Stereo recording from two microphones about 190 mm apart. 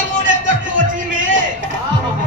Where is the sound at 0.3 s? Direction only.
45° right (ahead or behind).